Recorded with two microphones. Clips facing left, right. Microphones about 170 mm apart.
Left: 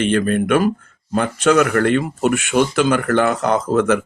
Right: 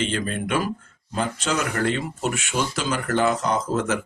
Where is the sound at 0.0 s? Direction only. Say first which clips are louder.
Left 9 dB; 60° left (ahead or behind).